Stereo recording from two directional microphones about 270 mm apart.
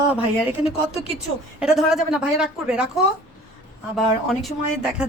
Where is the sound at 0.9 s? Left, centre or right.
Left.